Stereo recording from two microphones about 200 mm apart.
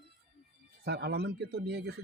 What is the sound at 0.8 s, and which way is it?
Speech, 55° right (ahead or behind).